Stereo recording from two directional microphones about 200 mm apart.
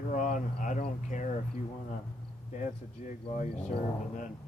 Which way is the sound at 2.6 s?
40° left (ahead or behind).